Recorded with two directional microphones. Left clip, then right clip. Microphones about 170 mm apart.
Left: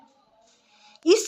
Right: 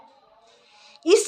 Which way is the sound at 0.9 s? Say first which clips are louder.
Right 2 dB; 25° left (ahead or behind).